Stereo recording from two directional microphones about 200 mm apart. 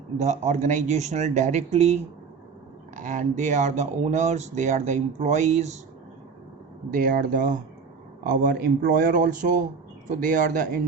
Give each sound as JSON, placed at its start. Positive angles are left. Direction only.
{"t": 0.2, "sound": "speech", "side_deg": -35}
{"t": 6.9, "sound": "speech", "side_deg": -45}